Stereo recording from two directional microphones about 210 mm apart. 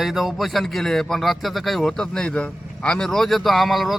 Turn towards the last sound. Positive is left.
turn(degrees=0)  # may be behind; listen again after turning